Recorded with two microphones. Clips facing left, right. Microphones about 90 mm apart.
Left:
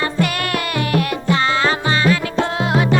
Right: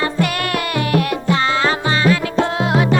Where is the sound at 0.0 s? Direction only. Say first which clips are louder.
Right 1 dB; 10° right (ahead or behind).